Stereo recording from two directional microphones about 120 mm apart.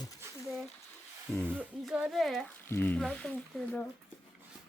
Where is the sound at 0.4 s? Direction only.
Centre (ahead or behind).